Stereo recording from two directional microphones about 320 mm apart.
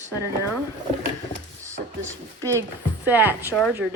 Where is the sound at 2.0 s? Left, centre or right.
Centre.